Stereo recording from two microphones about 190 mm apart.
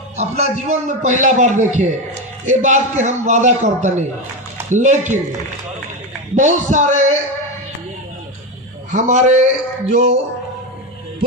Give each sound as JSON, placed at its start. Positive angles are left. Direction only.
{"t": 0.2, "sound": "a man's voice", "side_deg": -35}
{"t": 6.3, "sound": "a man's voice", "side_deg": -40}
{"t": 8.9, "sound": "a man's voice", "side_deg": -40}